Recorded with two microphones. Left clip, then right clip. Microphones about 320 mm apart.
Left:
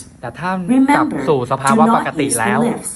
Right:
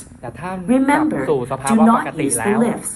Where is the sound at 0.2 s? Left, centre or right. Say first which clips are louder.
Left 6 dB; left.